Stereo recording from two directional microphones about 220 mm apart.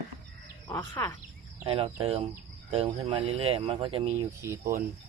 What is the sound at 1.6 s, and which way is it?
Speech, 25° right (ahead or behind).